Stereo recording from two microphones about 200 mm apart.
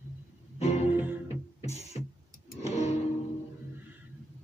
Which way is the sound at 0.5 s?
30° left (ahead or behind).